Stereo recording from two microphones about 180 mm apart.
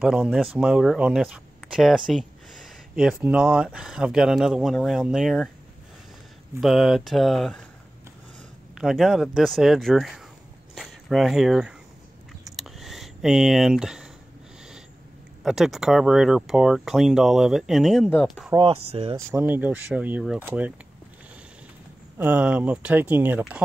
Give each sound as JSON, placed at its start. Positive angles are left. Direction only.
{"t": 0.0, "sound": "speech", "side_deg": -5}
{"t": 6.6, "sound": "speech", "side_deg": 0}
{"t": 8.7, "sound": "speech", "side_deg": 0}
{"t": 12.5, "sound": "a sound", "side_deg": 0}
{"t": 15.4, "sound": "speech", "side_deg": 0}
{"t": 18.6, "sound": "speech", "side_deg": -35}
{"t": 19.1, "sound": "speech", "side_deg": -10}
{"t": 22.2, "sound": "speech", "side_deg": -10}